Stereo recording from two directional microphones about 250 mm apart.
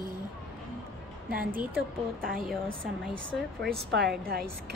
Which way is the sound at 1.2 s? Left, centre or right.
Right.